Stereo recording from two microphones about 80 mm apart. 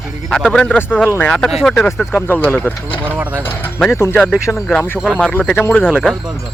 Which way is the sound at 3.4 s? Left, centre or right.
Left.